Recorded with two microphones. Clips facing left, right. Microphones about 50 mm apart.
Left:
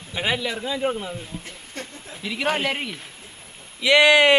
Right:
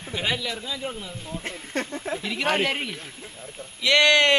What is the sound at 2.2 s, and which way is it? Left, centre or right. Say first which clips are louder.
Speech: left 1 dB; centre.